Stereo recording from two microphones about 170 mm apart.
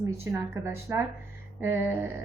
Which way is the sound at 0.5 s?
15° right (ahead or behind).